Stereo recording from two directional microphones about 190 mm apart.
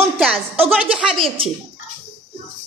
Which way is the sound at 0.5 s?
30° right (ahead or behind).